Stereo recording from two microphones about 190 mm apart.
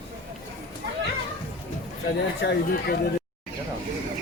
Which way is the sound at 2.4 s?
60° left (ahead or behind).